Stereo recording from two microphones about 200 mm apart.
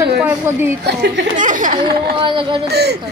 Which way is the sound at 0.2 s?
10° right (ahead or behind).